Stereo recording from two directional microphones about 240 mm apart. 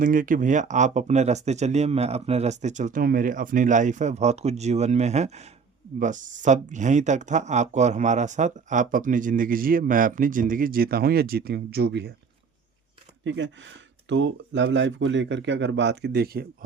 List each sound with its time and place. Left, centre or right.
0.0 s speech: right
13.2 s speech: right